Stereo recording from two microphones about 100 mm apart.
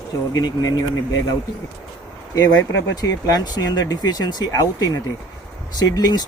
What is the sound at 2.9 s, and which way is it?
Speech, 40° left (ahead or behind).